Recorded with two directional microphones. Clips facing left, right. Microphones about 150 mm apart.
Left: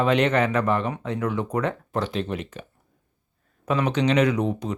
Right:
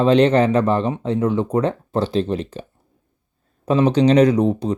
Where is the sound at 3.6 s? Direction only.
30° right (ahead or behind).